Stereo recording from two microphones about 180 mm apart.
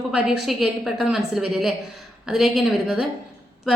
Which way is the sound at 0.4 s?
Centre (ahead or behind).